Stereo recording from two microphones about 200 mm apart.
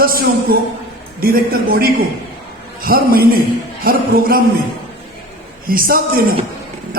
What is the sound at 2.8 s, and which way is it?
A man's voice, 50° right (ahead or behind).